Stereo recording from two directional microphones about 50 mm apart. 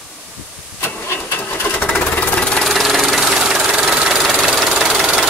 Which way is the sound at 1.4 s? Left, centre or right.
Left.